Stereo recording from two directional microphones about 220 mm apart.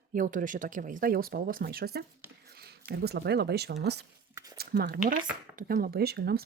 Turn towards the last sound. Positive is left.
turn(degrees=-45)  # may be behind; listen again after turning